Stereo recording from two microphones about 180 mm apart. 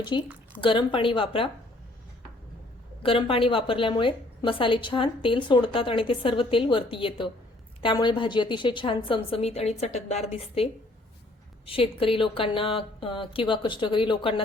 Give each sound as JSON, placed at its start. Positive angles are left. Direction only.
{"t": 0.1, "sound": "a woman's voice", "side_deg": 25}
{"t": 3.0, "sound": "a woman's voice", "side_deg": 30}